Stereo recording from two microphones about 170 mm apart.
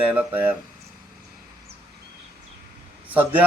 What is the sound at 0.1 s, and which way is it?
Speech, 10° right (ahead or behind).